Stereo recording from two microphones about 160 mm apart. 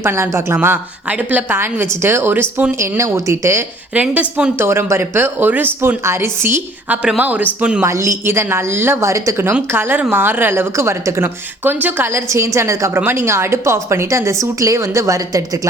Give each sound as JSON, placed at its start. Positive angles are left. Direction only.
{"t": 0.0, "sound": "a woman's voice", "side_deg": -15}